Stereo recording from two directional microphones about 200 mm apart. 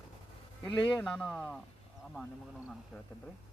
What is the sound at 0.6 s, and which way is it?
Speech, 25° left (ahead or behind).